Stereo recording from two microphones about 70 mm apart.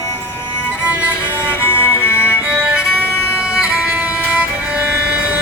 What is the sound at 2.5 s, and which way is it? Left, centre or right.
Violin, centre.